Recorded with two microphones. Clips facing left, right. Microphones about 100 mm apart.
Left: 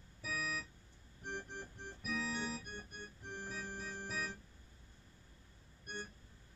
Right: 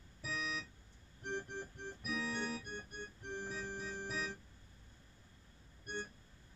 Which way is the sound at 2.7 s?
20° right (ahead or behind).